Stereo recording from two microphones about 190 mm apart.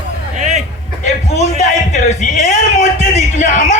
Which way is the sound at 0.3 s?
40° right (ahead or behind).